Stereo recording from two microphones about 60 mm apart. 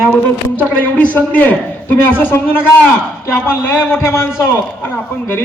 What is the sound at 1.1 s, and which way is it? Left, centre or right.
A man's voice, left.